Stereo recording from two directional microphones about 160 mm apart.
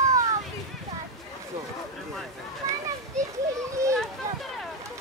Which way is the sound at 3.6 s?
20° right (ahead or behind).